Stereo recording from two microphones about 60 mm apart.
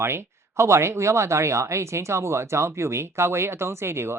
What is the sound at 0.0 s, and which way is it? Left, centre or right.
Speech, right.